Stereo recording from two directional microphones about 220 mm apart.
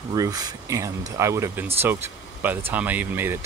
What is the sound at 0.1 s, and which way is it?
Speech, 15° right (ahead or behind).